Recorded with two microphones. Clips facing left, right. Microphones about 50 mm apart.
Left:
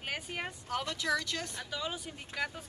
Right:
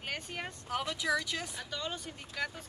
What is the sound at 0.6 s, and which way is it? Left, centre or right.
Speech, centre.